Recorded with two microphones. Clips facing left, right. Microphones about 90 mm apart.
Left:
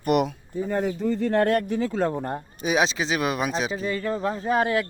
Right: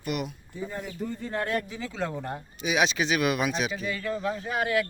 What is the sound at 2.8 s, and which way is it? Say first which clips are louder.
Speech: left 1 dB; 25° left (ahead or behind).